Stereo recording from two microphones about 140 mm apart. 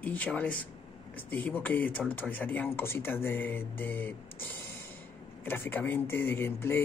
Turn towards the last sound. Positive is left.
turn(degrees=15)  # may be behind; listen again after turning